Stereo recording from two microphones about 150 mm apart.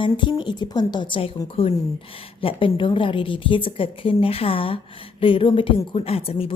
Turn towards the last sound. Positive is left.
turn(degrees=40)  # may be behind; listen again after turning